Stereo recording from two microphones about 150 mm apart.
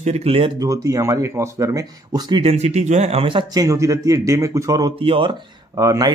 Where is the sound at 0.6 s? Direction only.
20° right (ahead or behind).